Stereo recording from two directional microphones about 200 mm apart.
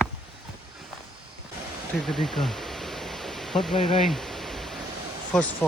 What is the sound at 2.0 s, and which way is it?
Pink noise, centre (ahead or behind).